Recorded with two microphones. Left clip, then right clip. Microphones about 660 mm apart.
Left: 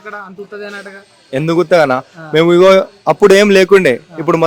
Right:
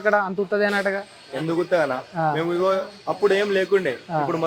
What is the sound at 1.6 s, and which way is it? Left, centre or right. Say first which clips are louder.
A man's voice: left 12 dB; left.